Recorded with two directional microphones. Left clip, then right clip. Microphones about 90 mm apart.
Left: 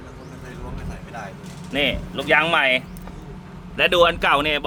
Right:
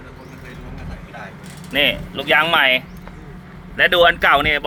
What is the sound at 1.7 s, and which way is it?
Speech, 20° left (ahead or behind).